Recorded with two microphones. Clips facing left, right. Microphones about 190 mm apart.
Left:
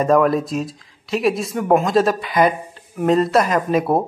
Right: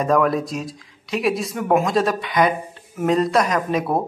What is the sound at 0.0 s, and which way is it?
Speech, centre (ahead or behind).